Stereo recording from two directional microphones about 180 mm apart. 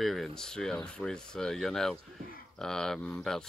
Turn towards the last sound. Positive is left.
turn(degrees=5)  # may be behind; listen again after turning